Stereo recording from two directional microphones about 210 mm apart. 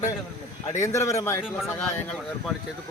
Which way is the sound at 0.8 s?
15° left (ahead or behind).